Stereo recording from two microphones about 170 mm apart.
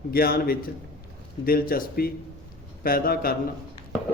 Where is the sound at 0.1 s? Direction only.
65° left (ahead or behind).